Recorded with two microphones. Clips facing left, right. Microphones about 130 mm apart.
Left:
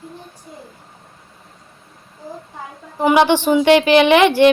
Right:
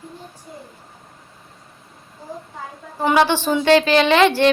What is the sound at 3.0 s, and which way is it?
A woman's voice, 15° left (ahead or behind).